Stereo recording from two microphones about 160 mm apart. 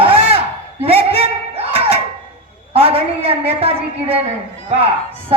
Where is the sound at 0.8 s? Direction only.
40° right (ahead or behind).